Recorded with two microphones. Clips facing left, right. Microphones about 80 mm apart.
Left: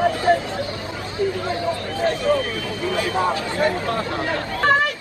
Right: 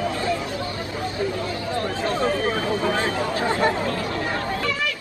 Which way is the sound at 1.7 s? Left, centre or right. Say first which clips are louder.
Left 1 dB; right.